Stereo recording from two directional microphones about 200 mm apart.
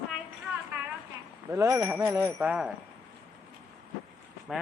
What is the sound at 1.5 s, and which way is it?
Speech, 15° right (ahead or behind).